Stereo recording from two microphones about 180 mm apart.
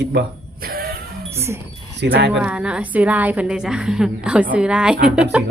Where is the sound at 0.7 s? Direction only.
55° right (ahead or behind).